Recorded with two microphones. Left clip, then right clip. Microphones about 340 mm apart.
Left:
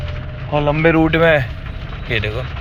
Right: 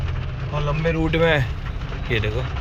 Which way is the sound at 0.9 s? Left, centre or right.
Centre.